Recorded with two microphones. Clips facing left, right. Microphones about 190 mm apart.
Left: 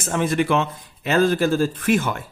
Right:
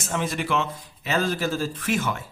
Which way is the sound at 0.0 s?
55° left (ahead or behind).